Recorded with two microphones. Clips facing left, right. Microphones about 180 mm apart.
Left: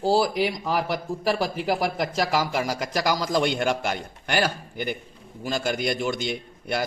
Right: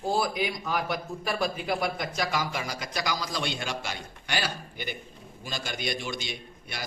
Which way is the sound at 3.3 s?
55° left (ahead or behind).